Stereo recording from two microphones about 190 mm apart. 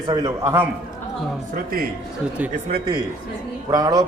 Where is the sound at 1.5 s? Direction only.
50° right (ahead or behind).